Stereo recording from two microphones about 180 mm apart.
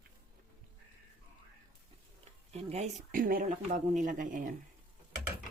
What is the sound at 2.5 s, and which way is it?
Speech, 35° right (ahead or behind).